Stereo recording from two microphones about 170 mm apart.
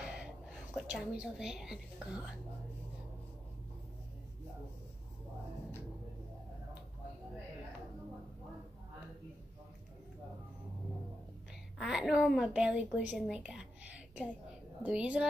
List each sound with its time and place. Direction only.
0.0 s a woman's voice: 5° right (ahead or behind)
11.8 s a woman's voice: 5° right (ahead or behind)
13.1 s a sound: 5° right (ahead or behind)
14.8 s a woman's voice: 5° right (ahead or behind)